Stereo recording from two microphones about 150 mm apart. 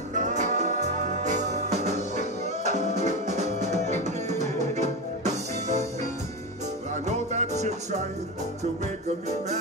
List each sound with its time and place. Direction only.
0.1 s music: 50° right (ahead or behind)
7.1 s music: 50° right (ahead or behind)